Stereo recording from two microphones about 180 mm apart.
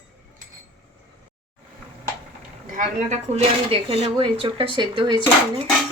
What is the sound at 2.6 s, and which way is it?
Speech, 45° right (ahead or behind).